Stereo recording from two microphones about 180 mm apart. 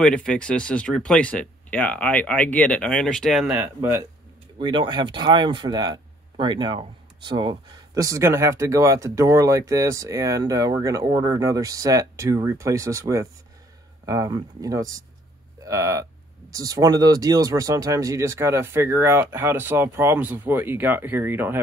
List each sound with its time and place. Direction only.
0.0 s speech: 5° left (ahead or behind); by 4.0 s 10° right (ahead or behind)
4.6 s speech: 25° right (ahead or behind)